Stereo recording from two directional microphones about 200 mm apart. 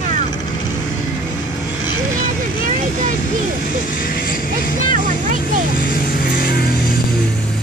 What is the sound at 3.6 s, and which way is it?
Speech, 45° left (ahead or behind).